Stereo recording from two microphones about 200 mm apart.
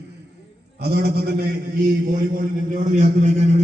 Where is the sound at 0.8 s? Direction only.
55° right (ahead or behind).